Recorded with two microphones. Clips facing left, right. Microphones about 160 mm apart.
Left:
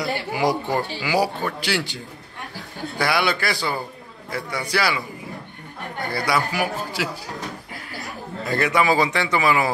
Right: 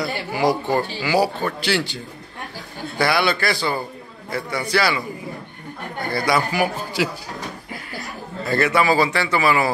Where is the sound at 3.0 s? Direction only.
10° left (ahead or behind).